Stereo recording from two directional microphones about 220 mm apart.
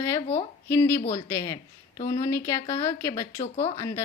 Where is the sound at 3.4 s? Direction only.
30° left (ahead or behind).